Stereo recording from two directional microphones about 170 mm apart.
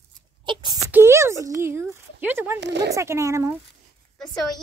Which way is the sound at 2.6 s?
90° right.